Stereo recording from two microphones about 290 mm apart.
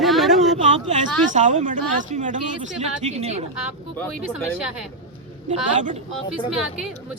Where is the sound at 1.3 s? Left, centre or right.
Right.